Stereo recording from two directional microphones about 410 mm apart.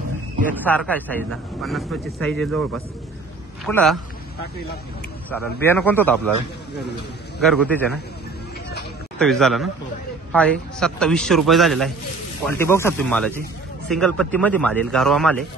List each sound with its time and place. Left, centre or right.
0.5 s a man's voice: centre
3.6 s a man's voice: centre
5.3 s a man's voice: centre
7.3 s a man's voice: centre
9.2 s a man's voice: centre